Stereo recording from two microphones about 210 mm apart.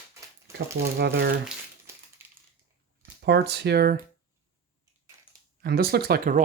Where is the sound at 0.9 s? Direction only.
50° right (ahead or behind).